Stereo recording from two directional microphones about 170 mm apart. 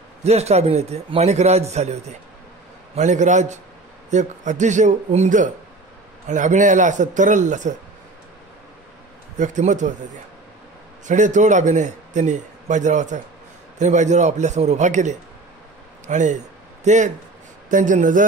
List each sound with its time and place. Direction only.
0.2 s a man's voice: 40° right (ahead or behind)
9.4 s a man's voice: 45° right (ahead or behind)
11.1 s a man's voice: 45° right (ahead or behind)